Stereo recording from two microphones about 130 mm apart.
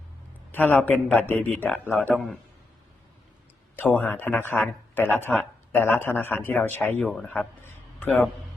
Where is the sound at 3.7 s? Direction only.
10° left (ahead or behind).